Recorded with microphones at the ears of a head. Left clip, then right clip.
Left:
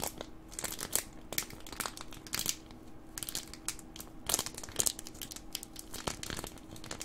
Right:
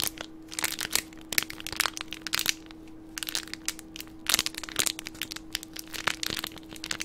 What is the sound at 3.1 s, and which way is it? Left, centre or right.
Crushing, right.